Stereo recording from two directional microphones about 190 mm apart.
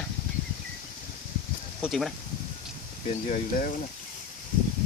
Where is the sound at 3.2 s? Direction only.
40° left (ahead or behind).